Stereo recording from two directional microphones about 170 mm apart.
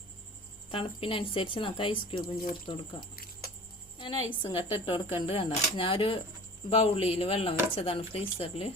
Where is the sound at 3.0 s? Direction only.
60° left (ahead or behind).